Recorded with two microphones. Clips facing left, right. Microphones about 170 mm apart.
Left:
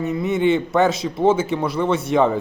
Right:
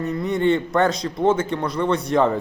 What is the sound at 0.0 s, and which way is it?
Speech, 5° left (ahead or behind).